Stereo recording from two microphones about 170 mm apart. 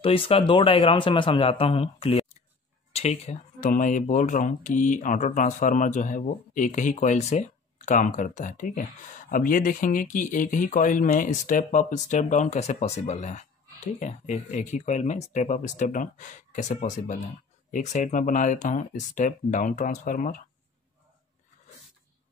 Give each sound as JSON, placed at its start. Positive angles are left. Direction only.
{"t": 0.0, "sound": "a man's voice", "side_deg": 35}